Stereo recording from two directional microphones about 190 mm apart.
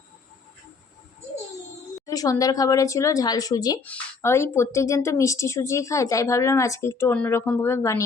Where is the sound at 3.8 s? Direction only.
10° left (ahead or behind).